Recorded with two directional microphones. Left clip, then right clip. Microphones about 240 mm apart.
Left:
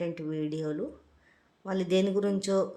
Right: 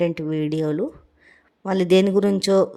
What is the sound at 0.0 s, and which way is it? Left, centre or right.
Speech, right.